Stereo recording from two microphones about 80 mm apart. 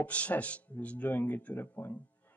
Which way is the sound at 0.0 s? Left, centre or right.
Centre.